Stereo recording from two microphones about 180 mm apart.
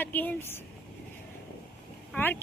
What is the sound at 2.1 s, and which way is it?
Speech, 10° left (ahead or behind).